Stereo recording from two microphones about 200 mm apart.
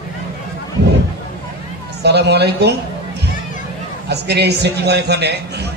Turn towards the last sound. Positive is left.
turn(degrees=-55)  # may be behind; listen again after turning